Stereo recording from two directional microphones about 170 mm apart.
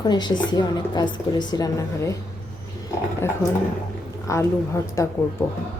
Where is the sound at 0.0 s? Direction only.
25° left (ahead or behind).